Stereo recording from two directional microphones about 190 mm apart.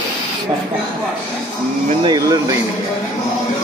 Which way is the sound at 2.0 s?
20° right (ahead or behind).